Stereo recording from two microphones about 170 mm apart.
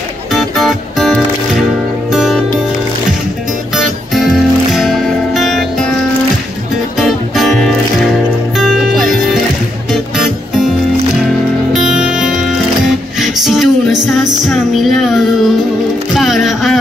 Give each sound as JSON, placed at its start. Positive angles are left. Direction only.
{"t": 0.3, "sound": "music", "side_deg": 0}
{"t": 3.7, "sound": "music", "side_deg": 0}
{"t": 7.0, "sound": "music", "side_deg": 0}
{"t": 11.7, "sound": "music", "side_deg": -5}